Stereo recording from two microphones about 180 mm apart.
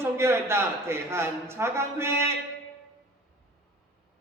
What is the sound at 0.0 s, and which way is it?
A man's voice, 15° right (ahead or behind).